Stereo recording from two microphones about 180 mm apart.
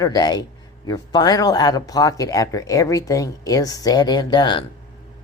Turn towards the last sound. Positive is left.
turn(degrees=25)  # may be behind; listen again after turning